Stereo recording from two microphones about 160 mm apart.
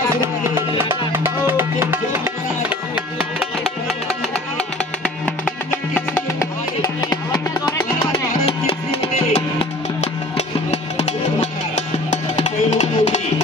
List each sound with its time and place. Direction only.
0.2 s music: 15° right (ahead or behind)
3.2 s music: 5° right (ahead or behind)
5.0 s music: 10° left (ahead or behind)
8.5 s music: 40° left (ahead or behind)